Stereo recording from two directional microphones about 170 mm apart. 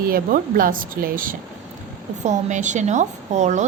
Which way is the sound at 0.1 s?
55° right (ahead or behind).